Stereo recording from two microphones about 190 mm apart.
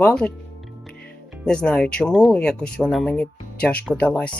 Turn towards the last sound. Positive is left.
turn(degrees=5)  # may be behind; listen again after turning